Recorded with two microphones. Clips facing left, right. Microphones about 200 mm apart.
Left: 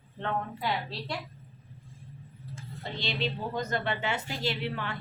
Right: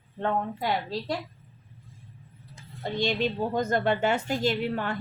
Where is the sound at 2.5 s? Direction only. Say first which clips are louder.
Right 9 dB; 45° right (ahead or behind).